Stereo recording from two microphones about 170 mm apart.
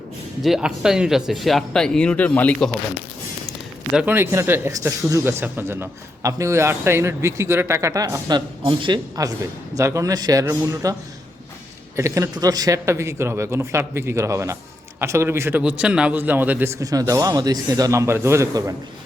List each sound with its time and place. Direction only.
0.4 s speech: 5° right (ahead or behind)
3.9 s a man's voice: 10° right (ahead or behind)
11.9 s speech: 15° right (ahead or behind)